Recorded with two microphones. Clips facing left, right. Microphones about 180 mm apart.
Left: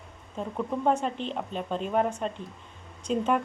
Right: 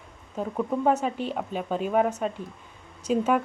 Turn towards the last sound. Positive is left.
turn(degrees=-5)  # may be behind; listen again after turning